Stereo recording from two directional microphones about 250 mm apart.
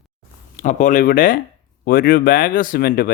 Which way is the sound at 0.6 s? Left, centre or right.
Left.